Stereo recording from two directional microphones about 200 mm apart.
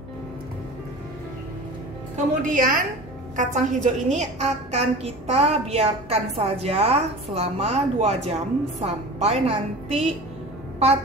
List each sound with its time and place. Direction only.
2.5 s a woman's voice: 40° right (ahead or behind)